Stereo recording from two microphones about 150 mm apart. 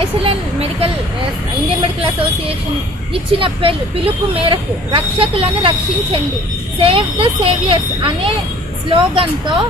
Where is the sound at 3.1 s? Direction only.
35° right (ahead or behind).